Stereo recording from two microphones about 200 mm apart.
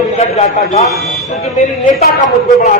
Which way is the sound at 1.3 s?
35° left (ahead or behind).